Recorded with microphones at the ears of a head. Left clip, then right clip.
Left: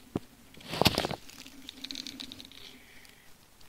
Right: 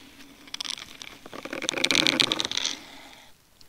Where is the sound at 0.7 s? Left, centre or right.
Left.